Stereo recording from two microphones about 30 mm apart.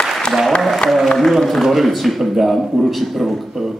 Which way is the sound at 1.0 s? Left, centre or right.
Centre.